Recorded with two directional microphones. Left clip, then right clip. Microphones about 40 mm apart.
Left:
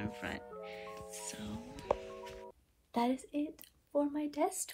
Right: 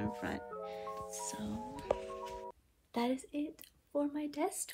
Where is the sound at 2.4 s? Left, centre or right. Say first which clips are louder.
Right 4 dB; centre.